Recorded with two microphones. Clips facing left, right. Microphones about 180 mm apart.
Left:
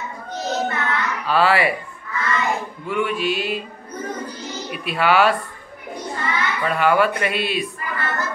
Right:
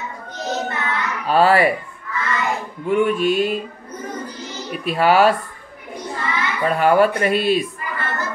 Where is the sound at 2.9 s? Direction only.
45° right (ahead or behind).